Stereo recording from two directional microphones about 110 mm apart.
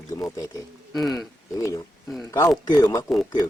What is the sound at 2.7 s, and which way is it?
Speech, 35° left (ahead or behind).